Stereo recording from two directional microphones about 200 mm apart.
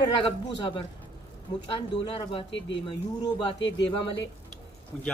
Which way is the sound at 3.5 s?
65° left (ahead or behind).